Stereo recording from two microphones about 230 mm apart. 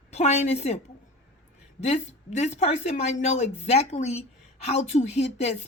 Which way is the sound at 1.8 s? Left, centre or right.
Left.